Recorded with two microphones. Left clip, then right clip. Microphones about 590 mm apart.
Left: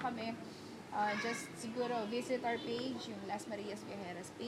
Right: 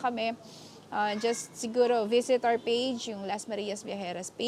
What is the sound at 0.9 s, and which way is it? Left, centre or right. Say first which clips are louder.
A woman's voice: right 8 dB; right.